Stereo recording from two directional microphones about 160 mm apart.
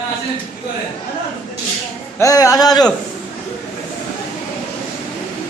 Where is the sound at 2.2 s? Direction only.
20° left (ahead or behind).